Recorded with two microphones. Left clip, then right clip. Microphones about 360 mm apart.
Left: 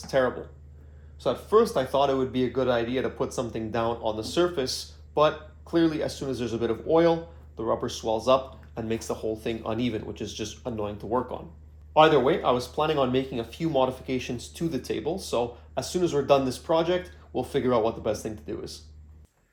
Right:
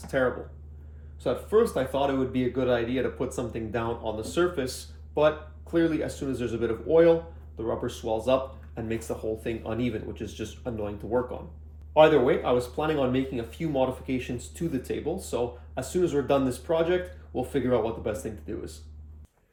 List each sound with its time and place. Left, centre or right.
1.2 s speech: centre
5.7 s speech: centre